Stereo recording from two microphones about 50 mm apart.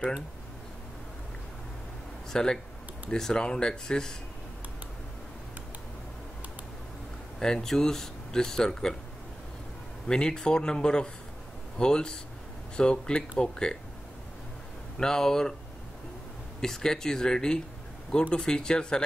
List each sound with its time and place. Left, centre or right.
2.3 s speech: centre
7.3 s speech: centre
10.0 s speech: centre
15.0 s speech: centre
16.6 s speech: centre